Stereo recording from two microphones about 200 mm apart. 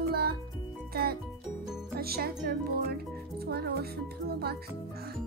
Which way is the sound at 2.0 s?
50° right (ahead or behind).